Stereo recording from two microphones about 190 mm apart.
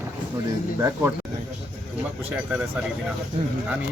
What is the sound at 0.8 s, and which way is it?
Speech, 15° right (ahead or behind).